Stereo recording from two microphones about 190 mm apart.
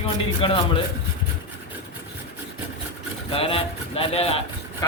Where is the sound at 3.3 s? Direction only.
30° left (ahead or behind).